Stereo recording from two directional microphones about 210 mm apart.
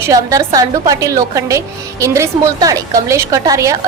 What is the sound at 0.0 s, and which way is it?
A woman's voice, 15° right (ahead or behind).